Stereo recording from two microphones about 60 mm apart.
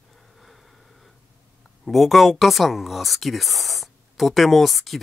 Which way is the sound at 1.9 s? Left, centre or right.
Centre.